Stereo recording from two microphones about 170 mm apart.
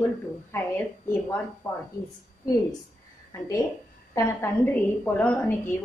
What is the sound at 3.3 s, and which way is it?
A woman's voice, 20° left (ahead or behind).